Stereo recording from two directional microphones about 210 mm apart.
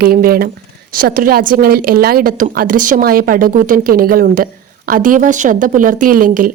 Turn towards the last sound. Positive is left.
turn(degrees=-40)  # may be behind; listen again after turning